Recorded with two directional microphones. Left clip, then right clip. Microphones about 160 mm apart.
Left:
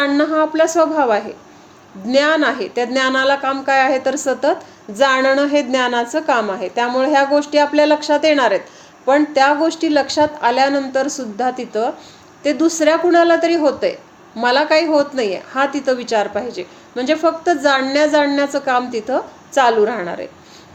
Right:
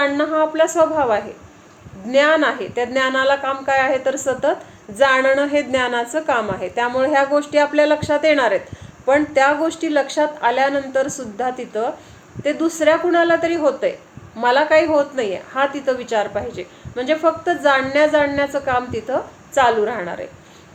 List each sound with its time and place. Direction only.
0.0 s a woman's voice: 35° left (ahead or behind)